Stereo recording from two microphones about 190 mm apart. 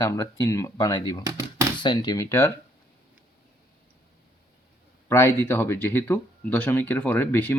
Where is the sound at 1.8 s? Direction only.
20° left (ahead or behind).